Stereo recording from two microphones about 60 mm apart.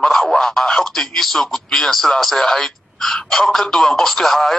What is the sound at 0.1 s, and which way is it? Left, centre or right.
Speech, centre.